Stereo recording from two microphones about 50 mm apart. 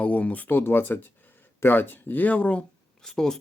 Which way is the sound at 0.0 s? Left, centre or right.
Left.